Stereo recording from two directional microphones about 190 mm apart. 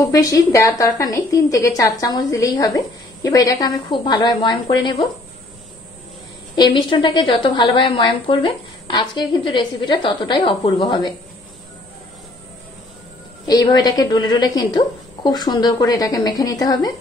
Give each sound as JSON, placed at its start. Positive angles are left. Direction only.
{"t": 0.0, "sound": "a woman's voice", "side_deg": 20}
{"t": 6.5, "sound": "a woman's voice", "side_deg": 25}
{"t": 13.5, "sound": "a woman's voice", "side_deg": 20}